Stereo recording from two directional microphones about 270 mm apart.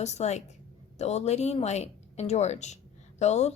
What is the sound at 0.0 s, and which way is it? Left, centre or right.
A woman's voice, left.